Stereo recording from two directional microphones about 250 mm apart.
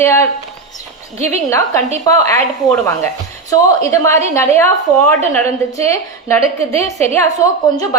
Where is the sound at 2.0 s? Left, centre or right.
Centre.